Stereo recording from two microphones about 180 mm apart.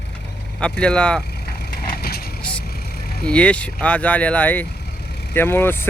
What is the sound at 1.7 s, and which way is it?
Vehicle, 55° left (ahead or behind).